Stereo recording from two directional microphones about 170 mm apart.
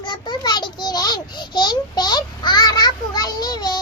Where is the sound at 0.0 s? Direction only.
25° left (ahead or behind).